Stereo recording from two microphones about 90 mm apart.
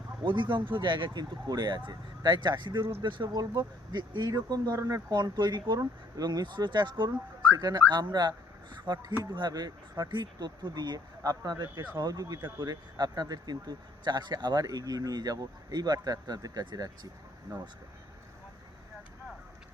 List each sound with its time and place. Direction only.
0.3 s speech: 60° right (ahead or behind)